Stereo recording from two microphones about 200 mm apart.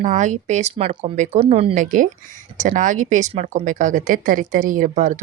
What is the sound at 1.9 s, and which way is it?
Speech, 40° right (ahead or behind).